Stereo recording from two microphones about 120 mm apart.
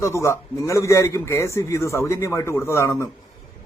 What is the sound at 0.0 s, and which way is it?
Speech, 25° left (ahead or behind).